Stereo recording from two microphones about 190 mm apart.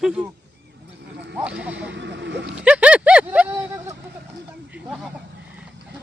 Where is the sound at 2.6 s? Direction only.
5° right (ahead or behind).